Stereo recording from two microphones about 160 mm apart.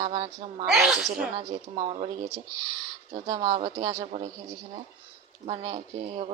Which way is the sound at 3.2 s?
25° right (ahead or behind).